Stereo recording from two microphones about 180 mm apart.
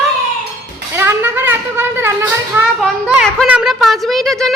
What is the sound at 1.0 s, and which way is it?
Speech, 15° right (ahead or behind).